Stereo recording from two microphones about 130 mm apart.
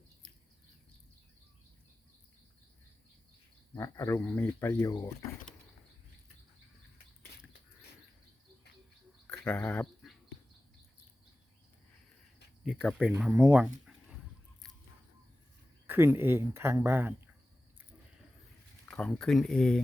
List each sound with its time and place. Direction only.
3.8 s speech: 20° left (ahead or behind)
4.8 s speech: 25° left (ahead or behind)
9.2 s a sound: 10° left (ahead or behind)
12.6 s speech: 5° right (ahead or behind)
13.3 s speech: 20° right (ahead or behind)
13.6 s a sound: 5° right (ahead or behind)
15.9 s speech: 20° right (ahead or behind)
18.9 s speech: 5° left (ahead or behind)